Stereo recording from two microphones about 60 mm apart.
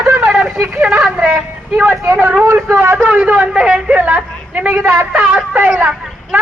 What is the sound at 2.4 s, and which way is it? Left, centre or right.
Vehicle, right.